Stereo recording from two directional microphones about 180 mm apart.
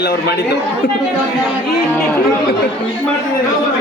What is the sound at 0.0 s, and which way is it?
Speech, 65° left (ahead or behind).